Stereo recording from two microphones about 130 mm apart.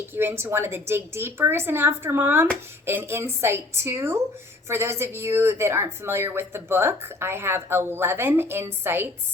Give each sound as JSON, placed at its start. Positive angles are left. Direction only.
{"t": 0.1, "sound": "speech", "side_deg": -15}